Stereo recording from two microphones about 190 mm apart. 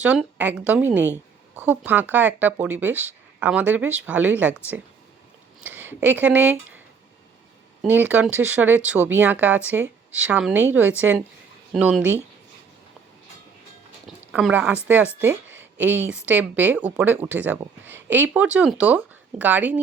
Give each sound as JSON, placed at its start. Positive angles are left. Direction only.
{"t": 0.0, "sound": "speech", "side_deg": -5}
{"t": 5.5, "sound": "speech", "side_deg": -10}
{"t": 7.8, "sound": "speech", "side_deg": -10}
{"t": 14.3, "sound": "speech", "side_deg": -10}
{"t": 15.3, "sound": "a sound", "side_deg": -90}
{"t": 15.8, "sound": "speech", "side_deg": -10}